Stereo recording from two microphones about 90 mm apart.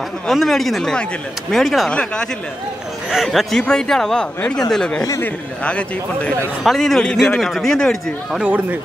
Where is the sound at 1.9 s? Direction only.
10° left (ahead or behind).